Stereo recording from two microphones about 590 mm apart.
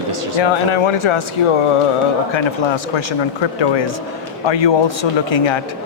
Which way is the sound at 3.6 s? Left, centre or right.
Left.